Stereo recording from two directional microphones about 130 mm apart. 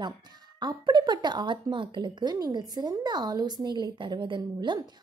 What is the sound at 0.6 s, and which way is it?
A woman's voice, 35° right (ahead or behind).